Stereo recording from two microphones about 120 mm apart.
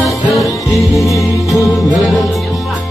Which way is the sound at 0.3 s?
Centre (ahead or behind).